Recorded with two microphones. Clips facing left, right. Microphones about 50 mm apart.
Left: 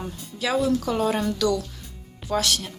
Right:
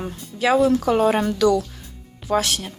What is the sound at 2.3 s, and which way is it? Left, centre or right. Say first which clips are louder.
Speech: right 3 dB; right.